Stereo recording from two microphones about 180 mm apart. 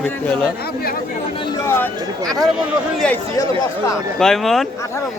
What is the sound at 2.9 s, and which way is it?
A man's voice, 5° left (ahead or behind).